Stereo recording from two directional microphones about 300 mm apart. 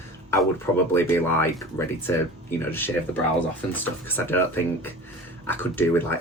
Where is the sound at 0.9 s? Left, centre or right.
Centre.